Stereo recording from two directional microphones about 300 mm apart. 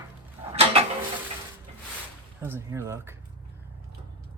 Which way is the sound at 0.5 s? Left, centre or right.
Centre.